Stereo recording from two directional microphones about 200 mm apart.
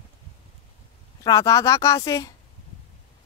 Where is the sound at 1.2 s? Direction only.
15° left (ahead or behind).